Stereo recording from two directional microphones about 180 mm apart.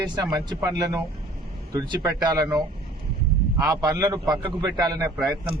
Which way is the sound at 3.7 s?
20° right (ahead or behind).